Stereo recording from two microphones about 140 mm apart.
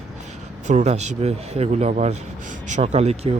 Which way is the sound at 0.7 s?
55° right (ahead or behind).